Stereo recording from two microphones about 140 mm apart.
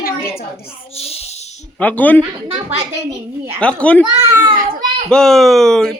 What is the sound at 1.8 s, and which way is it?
Speech, 10° left (ahead or behind).